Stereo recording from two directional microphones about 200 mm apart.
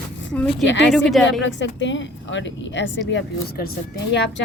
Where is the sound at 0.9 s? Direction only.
Centre (ahead or behind).